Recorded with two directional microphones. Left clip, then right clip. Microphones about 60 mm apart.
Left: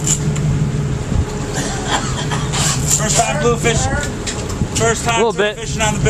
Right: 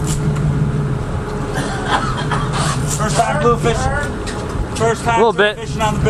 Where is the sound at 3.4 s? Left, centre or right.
Centre.